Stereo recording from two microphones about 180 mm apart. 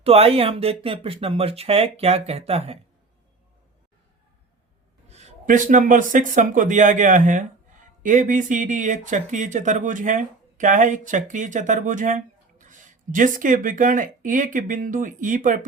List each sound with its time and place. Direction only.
0.0 s speech: 35° right (ahead or behind)
5.0 s speech: 40° right (ahead or behind)